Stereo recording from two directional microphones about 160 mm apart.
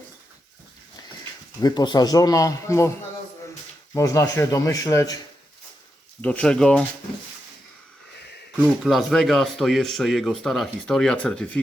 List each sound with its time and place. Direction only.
1.6 s a man's voice: 25° left (ahead or behind)
3.9 s a man's voice: 20° left (ahead or behind)
6.2 s speech: 5° left (ahead or behind)
8.5 s speech: centre (ahead or behind)